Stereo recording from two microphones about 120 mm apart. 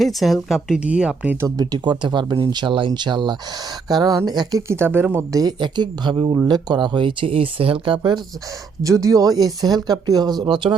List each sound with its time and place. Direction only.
0.0 s speech: centre (ahead or behind)
1.4 s speech: 30° right (ahead or behind)
4.7 s speech: 20° right (ahead or behind)
5.4 s speech: 35° right (ahead or behind)
8.8 s speech: 25° right (ahead or behind)